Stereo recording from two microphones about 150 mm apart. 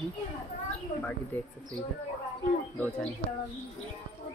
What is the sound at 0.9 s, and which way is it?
Speech, 50° left (ahead or behind).